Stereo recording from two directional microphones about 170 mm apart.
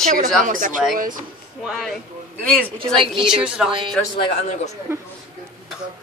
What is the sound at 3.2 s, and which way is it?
Speech, 5° right (ahead or behind).